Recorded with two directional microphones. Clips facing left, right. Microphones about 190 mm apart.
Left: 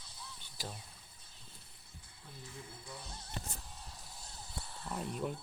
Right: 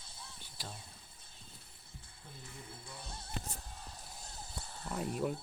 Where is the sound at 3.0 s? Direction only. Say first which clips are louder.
Right 1 dB; 55° right (ahead or behind).